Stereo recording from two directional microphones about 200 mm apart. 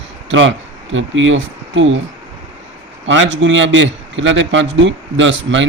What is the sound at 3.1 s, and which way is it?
Speech, 70° right (ahead or behind).